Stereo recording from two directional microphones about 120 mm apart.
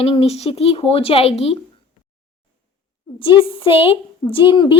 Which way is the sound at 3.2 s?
45° left (ahead or behind).